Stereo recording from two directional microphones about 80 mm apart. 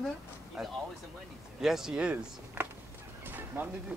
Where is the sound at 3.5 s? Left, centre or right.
Right.